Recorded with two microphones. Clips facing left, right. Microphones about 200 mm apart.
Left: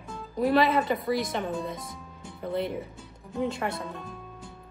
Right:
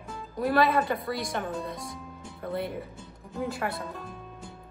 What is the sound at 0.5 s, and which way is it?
A woman's voice, 20° left (ahead or behind).